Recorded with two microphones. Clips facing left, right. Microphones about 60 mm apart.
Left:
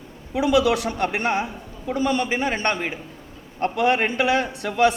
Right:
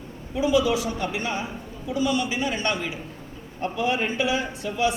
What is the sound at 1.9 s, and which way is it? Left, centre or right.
A man's voice, left.